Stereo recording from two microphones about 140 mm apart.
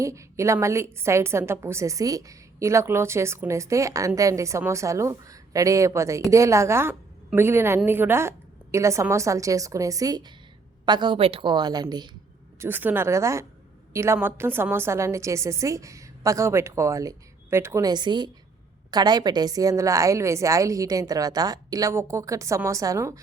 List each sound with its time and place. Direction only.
0.0 s a woman's voice: 20° right (ahead or behind)
12.5 s a woman's voice: 15° right (ahead or behind)